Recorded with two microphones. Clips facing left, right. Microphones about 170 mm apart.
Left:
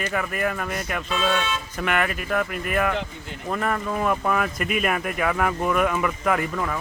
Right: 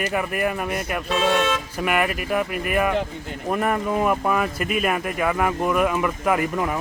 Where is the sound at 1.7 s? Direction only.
10° right (ahead or behind).